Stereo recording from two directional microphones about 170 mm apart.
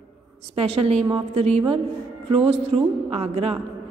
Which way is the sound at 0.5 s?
40° right (ahead or behind).